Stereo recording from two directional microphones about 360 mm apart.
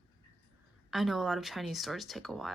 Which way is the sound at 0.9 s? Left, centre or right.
Centre.